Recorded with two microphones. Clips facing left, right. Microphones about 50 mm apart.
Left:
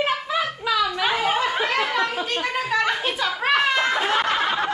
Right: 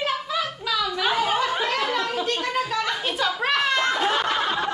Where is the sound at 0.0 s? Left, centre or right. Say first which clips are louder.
Left 3 dB; left.